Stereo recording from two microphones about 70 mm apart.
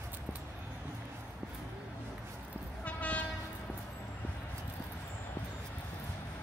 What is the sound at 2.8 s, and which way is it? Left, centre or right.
Train, left.